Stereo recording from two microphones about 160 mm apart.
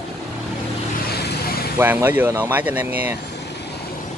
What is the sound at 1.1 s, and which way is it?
Vehicle, 80° left.